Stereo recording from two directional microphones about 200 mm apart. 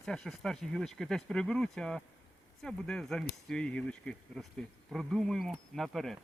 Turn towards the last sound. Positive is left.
turn(degrees=0)  # may be behind; listen again after turning